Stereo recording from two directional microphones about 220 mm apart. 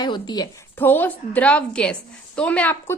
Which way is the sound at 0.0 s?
20° left (ahead or behind).